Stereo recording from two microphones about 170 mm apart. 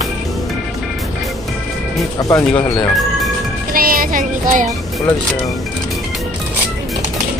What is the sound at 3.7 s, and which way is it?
Speech, 60° right (ahead or behind).